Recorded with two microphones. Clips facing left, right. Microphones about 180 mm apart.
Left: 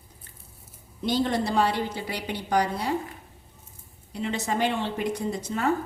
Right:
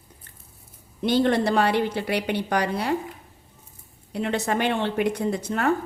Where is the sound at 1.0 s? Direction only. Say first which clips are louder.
Right 5 dB; 65° right (ahead or behind).